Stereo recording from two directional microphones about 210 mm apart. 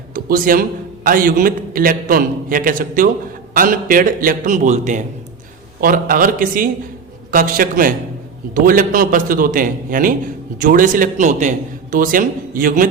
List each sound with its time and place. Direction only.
0.1 s music: 45° right (ahead or behind)
1.0 s a man's voice: 40° right (ahead or behind)